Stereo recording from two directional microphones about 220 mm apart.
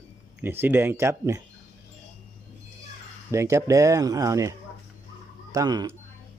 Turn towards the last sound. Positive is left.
turn(degrees=-20)  # may be behind; listen again after turning